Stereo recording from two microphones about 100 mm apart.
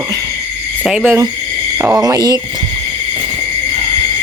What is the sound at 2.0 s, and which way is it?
Speech, 40° right (ahead or behind).